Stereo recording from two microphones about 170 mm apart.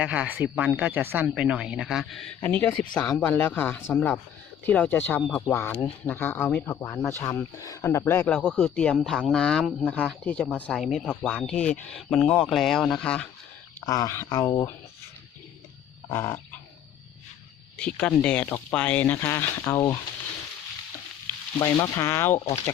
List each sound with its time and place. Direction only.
0.0 s speech: 10° right (ahead or behind)
13.8 s speech: 20° left (ahead or behind)
16.0 s frog: 15° left (ahead or behind)
17.7 s speech: 5° left (ahead or behind)
21.6 s speech: 20° left (ahead or behind)
22.4 s speech: 40° left (ahead or behind)